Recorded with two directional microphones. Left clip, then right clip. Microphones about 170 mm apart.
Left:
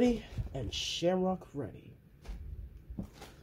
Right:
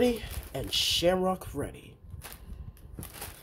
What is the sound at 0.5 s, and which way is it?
Speech, 5° right (ahead or behind).